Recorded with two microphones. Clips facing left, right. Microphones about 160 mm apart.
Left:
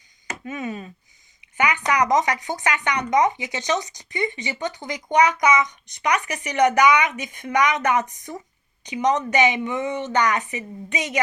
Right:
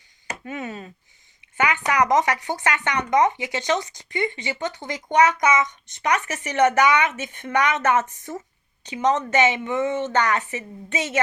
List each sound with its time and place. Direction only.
0.6 s speech: 20° left (ahead or behind)